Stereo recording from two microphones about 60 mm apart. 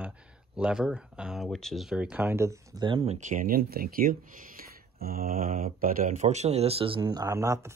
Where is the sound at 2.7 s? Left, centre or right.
Right.